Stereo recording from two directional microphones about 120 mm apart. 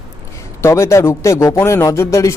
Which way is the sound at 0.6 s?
25° left (ahead or behind).